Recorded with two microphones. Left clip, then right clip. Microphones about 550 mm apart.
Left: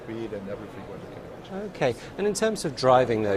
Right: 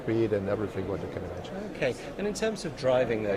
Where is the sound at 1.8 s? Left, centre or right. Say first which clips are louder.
Left 5 dB; left.